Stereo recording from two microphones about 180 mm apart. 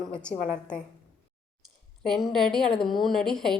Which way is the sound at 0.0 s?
5° left (ahead or behind).